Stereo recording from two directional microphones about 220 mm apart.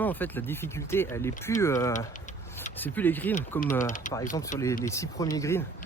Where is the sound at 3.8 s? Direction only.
35° left (ahead or behind).